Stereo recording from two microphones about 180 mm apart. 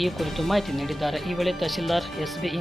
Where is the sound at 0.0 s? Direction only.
Centre (ahead or behind).